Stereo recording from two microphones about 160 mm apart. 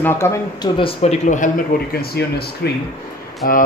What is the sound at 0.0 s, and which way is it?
Speech, 15° left (ahead or behind).